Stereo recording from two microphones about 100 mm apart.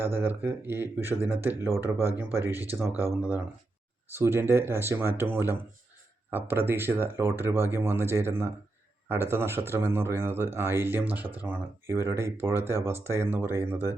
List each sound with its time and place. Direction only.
0.0 s speech: 20° right (ahead or behind)